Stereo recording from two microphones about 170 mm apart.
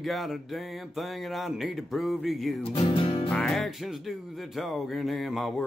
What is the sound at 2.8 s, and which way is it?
Music, 30° left (ahead or behind).